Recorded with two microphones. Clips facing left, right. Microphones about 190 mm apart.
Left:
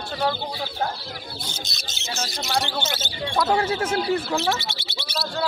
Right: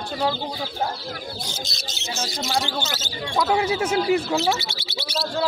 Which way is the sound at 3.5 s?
10° right (ahead or behind).